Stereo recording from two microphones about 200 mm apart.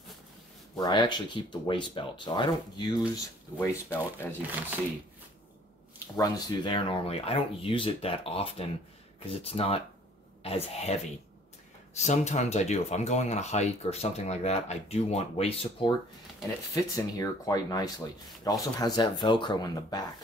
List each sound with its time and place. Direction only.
0.7 s speech: 20° left (ahead or behind)
4.4 s speech: 10° right (ahead or behind)
6.1 s speech: 20° left (ahead or behind)
16.7 s speech: 15° left (ahead or behind)